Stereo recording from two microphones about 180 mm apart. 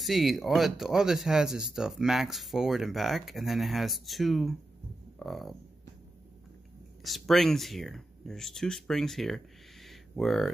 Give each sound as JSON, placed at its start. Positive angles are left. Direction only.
{"t": 0.0, "sound": "speech", "side_deg": 0}
{"t": 7.0, "sound": "speech", "side_deg": 0}